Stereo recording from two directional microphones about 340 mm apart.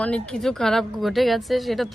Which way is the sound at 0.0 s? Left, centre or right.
Centre.